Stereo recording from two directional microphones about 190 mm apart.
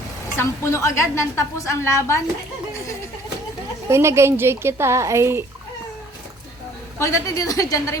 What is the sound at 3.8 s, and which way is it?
A woman's voice, 15° right (ahead or behind).